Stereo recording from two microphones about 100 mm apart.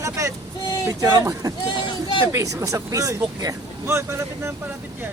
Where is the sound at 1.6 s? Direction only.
50° left (ahead or behind).